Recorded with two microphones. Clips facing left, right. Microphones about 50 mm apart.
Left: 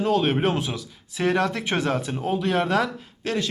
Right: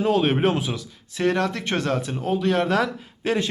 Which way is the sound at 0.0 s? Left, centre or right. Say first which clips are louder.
Right 1 dB; centre.